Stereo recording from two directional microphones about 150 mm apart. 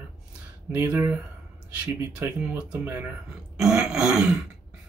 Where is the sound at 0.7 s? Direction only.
15° right (ahead or behind).